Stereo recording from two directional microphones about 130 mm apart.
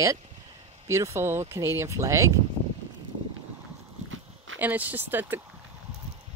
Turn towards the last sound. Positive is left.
turn(degrees=-15)  # may be behind; listen again after turning